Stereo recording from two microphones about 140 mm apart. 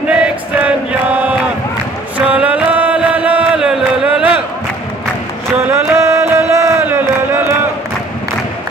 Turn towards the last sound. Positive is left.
turn(degrees=-15)  # may be behind; listen again after turning